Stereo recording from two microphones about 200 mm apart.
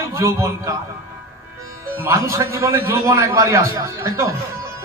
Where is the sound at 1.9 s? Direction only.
15° right (ahead or behind).